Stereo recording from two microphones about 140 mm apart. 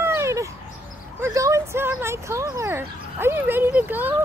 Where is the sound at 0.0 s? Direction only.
20° right (ahead or behind).